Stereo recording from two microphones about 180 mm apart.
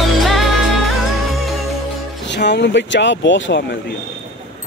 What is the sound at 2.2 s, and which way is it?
Speech, 75° left (ahead or behind).